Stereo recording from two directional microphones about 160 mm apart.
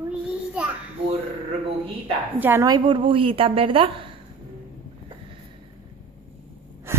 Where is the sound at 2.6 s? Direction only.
30° right (ahead or behind).